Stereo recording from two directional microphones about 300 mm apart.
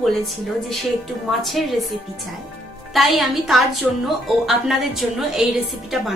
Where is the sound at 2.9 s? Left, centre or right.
Centre.